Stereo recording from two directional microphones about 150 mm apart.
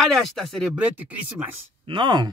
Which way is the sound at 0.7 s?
10° right (ahead or behind).